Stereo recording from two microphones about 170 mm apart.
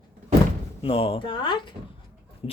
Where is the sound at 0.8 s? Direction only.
35° left (ahead or behind).